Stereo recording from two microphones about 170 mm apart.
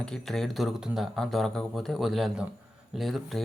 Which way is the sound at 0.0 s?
5° left (ahead or behind).